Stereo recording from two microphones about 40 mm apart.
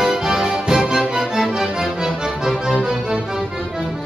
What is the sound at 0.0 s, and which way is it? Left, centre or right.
Music, centre.